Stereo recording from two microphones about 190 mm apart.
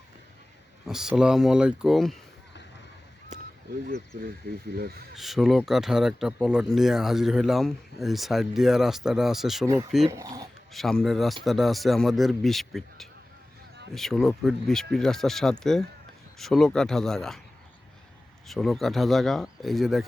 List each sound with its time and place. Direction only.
0.9 s speech: 5° right (ahead or behind)
3.3 s crow: 40° right (ahead or behind)
4.4 s speech: 55° right (ahead or behind)
5.1 s speech: centre (ahead or behind)
10.1 s speech: 15° right (ahead or behind)
10.7 s speech: centre (ahead or behind)
18.4 s speech: centre (ahead or behind)